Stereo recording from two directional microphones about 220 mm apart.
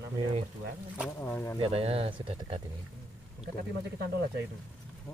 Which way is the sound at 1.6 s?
25° right (ahead or behind).